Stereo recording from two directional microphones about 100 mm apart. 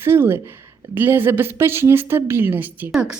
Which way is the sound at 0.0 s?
25° right (ahead or behind).